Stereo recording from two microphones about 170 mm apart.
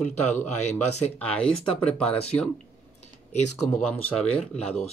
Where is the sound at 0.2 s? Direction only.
40° left (ahead or behind).